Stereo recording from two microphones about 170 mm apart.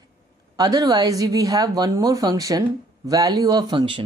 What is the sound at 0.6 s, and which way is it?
Speech, 20° right (ahead or behind).